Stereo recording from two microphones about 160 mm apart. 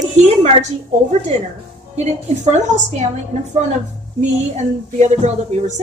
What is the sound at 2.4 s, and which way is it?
Speech, 45° right (ahead or behind).